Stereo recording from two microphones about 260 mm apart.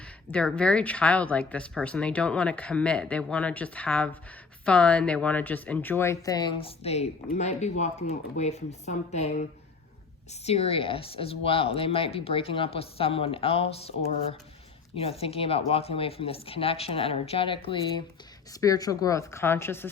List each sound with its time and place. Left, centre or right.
0.3 s speech: centre